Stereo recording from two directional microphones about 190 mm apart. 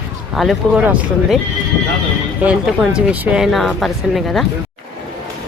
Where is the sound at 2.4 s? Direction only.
5° right (ahead or behind).